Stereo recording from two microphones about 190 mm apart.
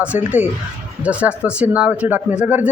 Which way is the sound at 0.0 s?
5° right (ahead or behind).